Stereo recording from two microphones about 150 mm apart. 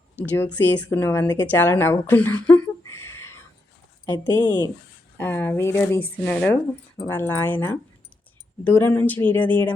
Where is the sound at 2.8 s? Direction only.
15° left (ahead or behind).